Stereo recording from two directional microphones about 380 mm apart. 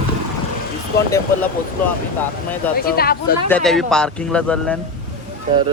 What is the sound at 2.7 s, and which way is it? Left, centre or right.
Speech, left.